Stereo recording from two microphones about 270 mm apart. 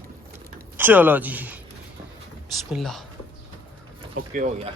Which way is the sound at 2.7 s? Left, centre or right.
Centre.